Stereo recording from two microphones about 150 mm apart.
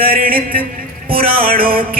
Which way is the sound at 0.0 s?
75° right (ahead or behind).